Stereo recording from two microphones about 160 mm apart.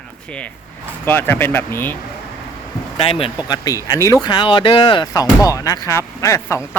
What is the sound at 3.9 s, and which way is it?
Speech, 20° left (ahead or behind).